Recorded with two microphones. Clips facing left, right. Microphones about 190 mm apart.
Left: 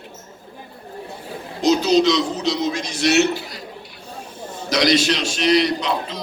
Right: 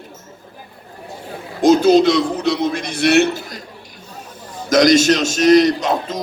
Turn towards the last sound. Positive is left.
turn(degrees=-45)  # may be behind; listen again after turning